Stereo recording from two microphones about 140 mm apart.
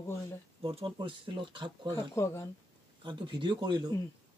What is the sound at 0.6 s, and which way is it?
Speech, 40° right (ahead or behind).